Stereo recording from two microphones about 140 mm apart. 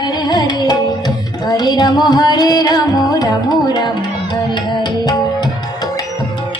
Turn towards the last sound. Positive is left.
turn(degrees=30)  # may be behind; listen again after turning